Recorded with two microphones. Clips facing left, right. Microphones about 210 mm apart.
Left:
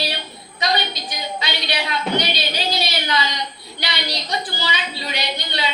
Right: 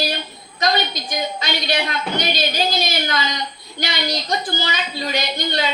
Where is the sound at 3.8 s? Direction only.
45° right (ahead or behind).